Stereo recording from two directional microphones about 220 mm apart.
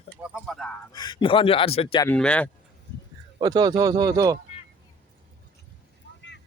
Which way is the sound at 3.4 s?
20° right (ahead or behind).